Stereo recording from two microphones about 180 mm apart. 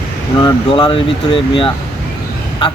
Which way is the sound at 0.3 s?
25° left (ahead or behind).